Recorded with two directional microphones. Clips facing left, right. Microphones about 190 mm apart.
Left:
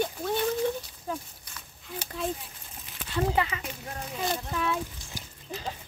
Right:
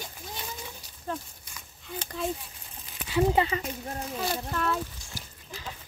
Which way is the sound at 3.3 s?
25° right (ahead or behind).